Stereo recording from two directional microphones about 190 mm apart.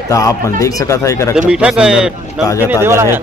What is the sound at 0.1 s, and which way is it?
Speech, 15° left (ahead or behind).